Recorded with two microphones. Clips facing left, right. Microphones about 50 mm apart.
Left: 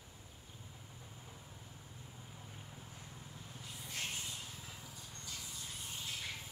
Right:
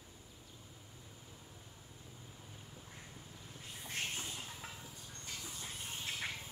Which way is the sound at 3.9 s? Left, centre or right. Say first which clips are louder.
Right 2 dB; right.